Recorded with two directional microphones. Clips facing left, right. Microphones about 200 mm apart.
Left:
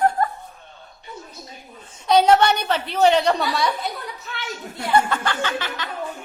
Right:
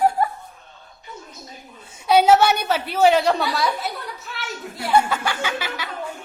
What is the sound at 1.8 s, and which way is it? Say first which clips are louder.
A woman's voice: even; 10° right (ahead or behind).